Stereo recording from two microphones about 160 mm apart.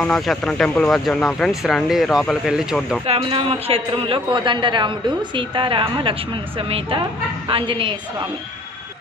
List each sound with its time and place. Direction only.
0.0 s speech: 5° left (ahead or behind)
3.1 s a man's voice: 35° right (ahead or behind)